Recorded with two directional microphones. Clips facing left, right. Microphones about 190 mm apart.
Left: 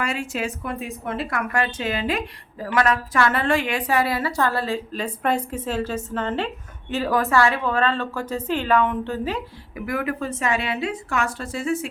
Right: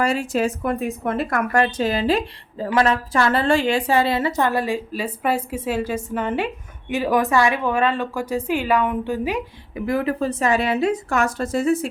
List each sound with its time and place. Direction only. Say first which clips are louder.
0.0 s a woman's voice: right 6 dB; 35° right (ahead or behind); by 9.4 s 10° right (ahead or behind)
9.7 s speech: right 4 dB; 25° right (ahead or behind)